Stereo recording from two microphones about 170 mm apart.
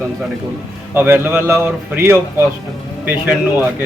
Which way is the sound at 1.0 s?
10° right (ahead or behind).